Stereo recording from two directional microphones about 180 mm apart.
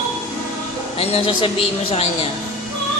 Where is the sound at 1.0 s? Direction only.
30° left (ahead or behind).